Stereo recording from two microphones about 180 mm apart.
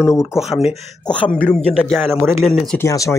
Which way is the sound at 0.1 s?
15° left (ahead or behind).